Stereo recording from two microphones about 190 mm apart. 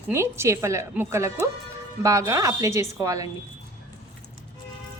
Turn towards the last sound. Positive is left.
turn(degrees=-15)  # may be behind; listen again after turning